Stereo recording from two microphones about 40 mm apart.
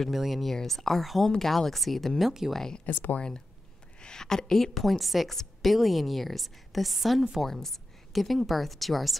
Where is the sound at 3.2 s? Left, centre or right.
Centre.